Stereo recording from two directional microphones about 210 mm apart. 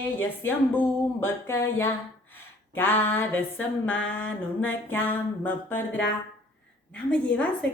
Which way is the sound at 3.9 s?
65° left (ahead or behind).